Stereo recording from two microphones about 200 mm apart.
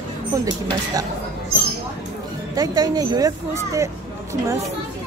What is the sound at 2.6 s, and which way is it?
Speech, 20° right (ahead or behind).